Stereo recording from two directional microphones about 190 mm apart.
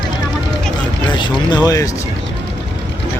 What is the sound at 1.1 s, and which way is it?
Speech, 25° left (ahead or behind).